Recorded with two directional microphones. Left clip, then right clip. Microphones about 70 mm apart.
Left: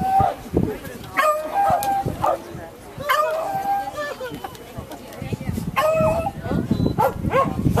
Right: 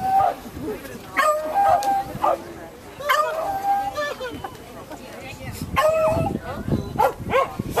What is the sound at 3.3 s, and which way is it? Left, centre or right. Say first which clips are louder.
Howl: even; centre.